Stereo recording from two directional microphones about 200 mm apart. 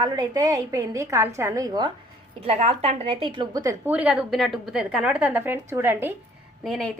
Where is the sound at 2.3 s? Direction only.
30° right (ahead or behind); by 6.1 s 10° right (ahead or behind).